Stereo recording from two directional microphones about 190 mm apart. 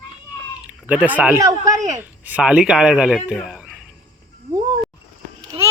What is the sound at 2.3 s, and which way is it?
Speech, 5° right (ahead or behind).